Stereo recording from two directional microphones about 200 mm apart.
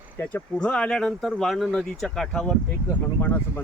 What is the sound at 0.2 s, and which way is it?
Speech, 10° left (ahead or behind).